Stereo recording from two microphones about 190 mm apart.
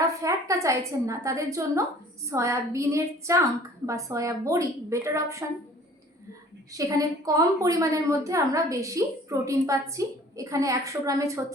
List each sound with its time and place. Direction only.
0.0 s a woman's voice: 15° right (ahead or behind)
6.7 s a woman's voice: 20° right (ahead or behind)